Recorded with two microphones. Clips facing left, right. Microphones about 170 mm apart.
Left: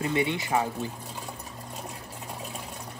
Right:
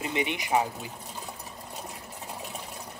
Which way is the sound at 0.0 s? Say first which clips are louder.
Left 3 dB; 20° right (ahead or behind).